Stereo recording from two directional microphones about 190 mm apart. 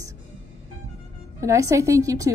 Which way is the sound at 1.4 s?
15° right (ahead or behind).